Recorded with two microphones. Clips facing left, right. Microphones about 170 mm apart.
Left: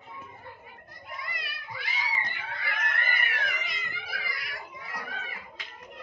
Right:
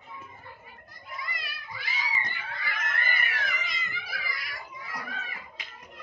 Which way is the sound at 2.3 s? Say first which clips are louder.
Left 1 dB; 65° left (ahead or behind).